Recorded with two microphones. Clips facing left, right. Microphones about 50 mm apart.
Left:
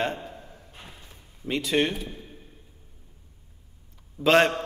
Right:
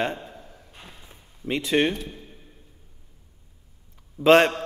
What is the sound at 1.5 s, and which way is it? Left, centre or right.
Speech, right.